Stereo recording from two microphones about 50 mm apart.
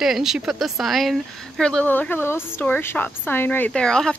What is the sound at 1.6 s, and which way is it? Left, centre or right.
Speech, centre.